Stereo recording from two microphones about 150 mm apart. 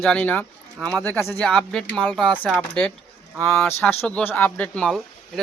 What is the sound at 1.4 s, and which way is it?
Speech, 5° left (ahead or behind).